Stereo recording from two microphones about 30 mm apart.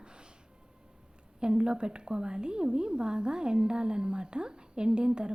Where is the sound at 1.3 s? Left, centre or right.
Right.